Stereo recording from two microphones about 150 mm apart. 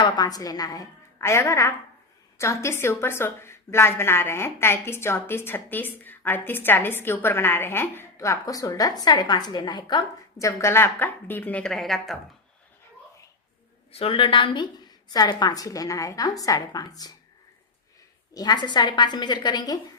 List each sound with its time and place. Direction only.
0.0 s a woman's voice: 25° left (ahead or behind); by 12.1 s centre (ahead or behind)
13.9 s a woman's voice: 40° left (ahead or behind)
18.3 s a woman's voice: 30° left (ahead or behind)